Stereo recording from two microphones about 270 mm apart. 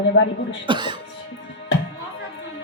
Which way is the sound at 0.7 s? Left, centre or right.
Centre.